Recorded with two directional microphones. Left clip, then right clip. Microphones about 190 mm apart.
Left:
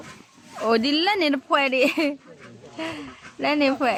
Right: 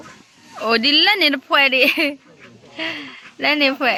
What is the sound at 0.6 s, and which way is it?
Speech, centre (ahead or behind).